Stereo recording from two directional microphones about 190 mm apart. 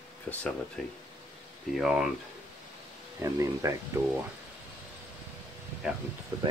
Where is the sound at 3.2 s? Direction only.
15° right (ahead or behind).